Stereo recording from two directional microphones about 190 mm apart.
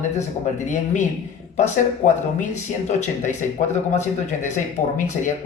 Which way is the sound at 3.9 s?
40° left (ahead or behind).